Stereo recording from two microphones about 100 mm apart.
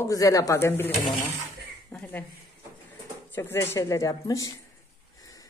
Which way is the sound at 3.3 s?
25° left (ahead or behind).